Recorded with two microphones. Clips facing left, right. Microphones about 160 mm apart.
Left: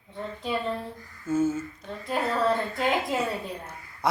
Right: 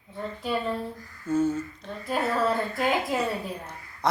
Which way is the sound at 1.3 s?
5° left (ahead or behind).